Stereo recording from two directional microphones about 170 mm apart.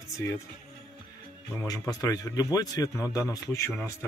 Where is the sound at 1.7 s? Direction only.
20° left (ahead or behind).